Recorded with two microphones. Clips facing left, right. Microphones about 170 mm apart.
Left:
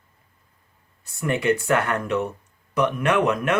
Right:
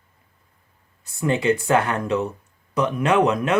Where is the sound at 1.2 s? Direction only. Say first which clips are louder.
Right 2 dB; 25° right (ahead or behind).